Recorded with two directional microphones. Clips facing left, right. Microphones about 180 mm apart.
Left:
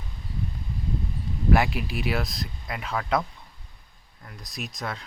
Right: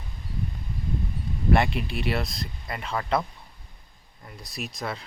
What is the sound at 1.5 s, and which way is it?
Speech, 5° left (ahead or behind).